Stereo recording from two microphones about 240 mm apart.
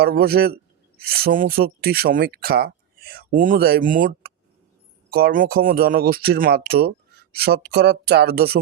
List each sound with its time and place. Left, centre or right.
0.0 s speech: right